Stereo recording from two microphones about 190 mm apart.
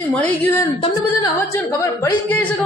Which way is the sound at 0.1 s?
10° left (ahead or behind).